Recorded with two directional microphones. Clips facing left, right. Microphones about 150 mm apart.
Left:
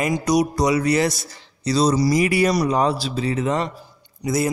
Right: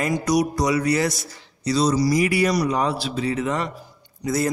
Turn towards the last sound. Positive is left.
turn(degrees=15)  # may be behind; listen again after turning